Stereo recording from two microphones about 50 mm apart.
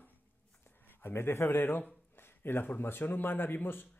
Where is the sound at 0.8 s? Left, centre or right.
Left.